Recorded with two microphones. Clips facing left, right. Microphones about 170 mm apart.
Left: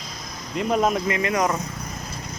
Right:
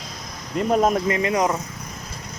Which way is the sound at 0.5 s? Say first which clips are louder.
Right 2 dB; 40° right (ahead or behind).